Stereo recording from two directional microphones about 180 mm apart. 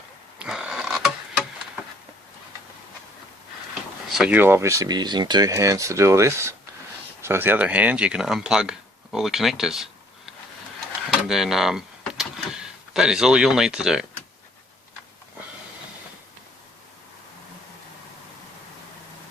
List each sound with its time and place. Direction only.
0.3 s a sound: 5° right (ahead or behind)
4.1 s speech: 5° right (ahead or behind)
11.2 s speech: 5° right (ahead or behind)